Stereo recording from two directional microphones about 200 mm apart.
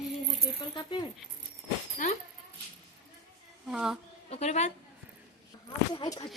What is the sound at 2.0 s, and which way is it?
Speech, 40° left (ahead or behind).